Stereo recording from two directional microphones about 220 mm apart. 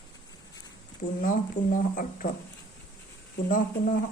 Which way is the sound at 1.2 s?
40° left (ahead or behind).